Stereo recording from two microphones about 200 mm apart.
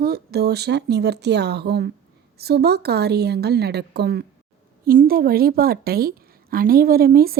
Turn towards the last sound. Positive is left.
turn(degrees=-50)  # may be behind; listen again after turning